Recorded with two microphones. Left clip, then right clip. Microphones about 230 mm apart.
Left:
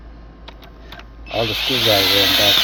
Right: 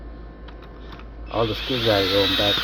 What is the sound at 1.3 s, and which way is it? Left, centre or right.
Owl, left.